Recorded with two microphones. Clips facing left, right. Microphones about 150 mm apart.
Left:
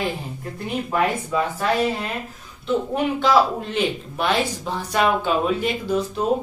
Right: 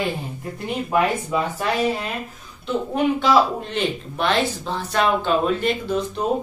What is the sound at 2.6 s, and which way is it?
Speech, centre (ahead or behind).